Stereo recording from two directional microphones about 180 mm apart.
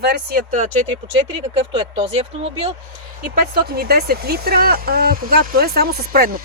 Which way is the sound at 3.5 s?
60° right (ahead or behind).